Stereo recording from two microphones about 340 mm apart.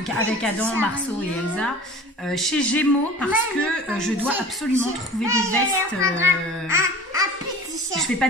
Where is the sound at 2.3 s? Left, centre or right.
Centre.